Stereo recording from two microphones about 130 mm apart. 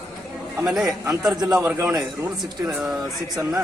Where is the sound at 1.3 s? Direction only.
30° right (ahead or behind).